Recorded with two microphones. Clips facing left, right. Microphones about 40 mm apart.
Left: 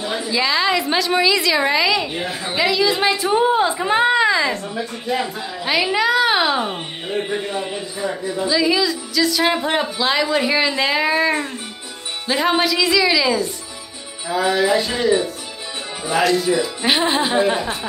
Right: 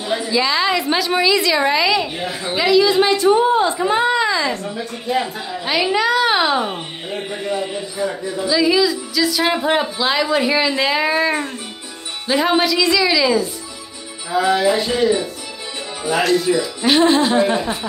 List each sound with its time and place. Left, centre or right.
0.0 s a woman's voice: centre
3.9 s a woman's voice: left
5.1 s a woman's voice: centre
16.1 s a woman's voice: centre
16.8 s speech: centre